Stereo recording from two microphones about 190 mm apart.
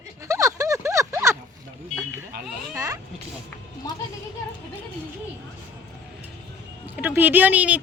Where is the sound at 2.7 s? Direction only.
15° right (ahead or behind).